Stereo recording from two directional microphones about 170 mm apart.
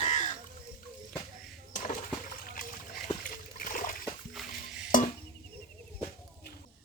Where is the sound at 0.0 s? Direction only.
45° left (ahead or behind).